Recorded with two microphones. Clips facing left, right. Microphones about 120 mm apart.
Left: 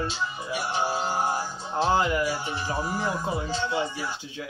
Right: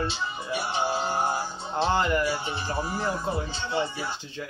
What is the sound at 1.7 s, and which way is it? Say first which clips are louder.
Speech: left 1 dB; 5° left (ahead or behind).